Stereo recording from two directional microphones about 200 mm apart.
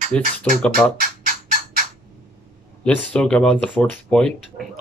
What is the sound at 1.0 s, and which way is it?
Music, 45° right (ahead or behind).